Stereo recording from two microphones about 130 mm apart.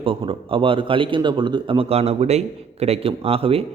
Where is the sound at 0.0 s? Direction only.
45° right (ahead or behind).